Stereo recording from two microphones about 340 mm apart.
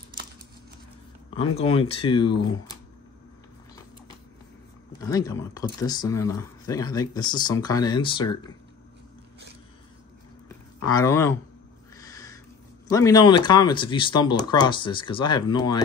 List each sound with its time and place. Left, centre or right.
1.3 s speech: centre
5.0 s speech: centre
10.9 s speech: centre
12.0 s a sound: centre
12.9 s speech: centre